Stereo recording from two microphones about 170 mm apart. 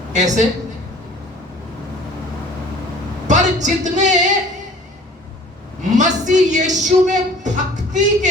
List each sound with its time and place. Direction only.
0.1 s speech: 45° right (ahead or behind)
3.2 s speech: 45° right (ahead or behind)
6.0 s speech: 45° right (ahead or behind)